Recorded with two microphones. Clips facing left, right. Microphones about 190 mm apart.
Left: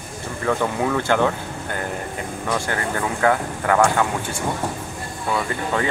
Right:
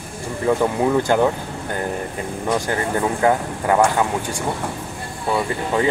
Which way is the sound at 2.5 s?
20° right (ahead or behind).